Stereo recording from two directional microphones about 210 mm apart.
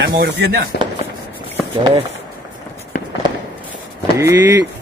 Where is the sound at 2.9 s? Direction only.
40° left (ahead or behind).